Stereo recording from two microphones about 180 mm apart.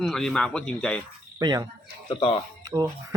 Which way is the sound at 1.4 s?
20° right (ahead or behind).